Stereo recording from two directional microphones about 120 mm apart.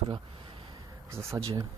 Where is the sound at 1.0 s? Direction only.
25° right (ahead or behind).